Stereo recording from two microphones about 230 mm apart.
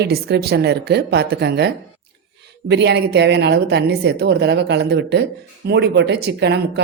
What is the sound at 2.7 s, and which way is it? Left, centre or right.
Speech, right.